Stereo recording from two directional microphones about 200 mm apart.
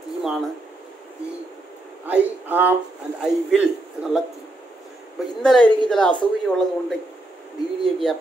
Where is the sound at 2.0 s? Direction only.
10° right (ahead or behind).